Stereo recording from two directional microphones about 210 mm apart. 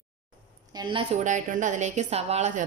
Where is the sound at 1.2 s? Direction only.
35° right (ahead or behind).